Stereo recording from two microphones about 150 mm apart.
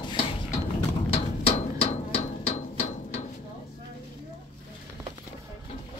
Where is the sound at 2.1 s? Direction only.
45° left (ahead or behind).